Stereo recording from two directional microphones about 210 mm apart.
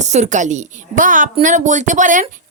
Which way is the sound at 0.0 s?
35° right (ahead or behind).